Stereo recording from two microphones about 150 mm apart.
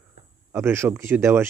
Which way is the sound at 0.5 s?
15° right (ahead or behind).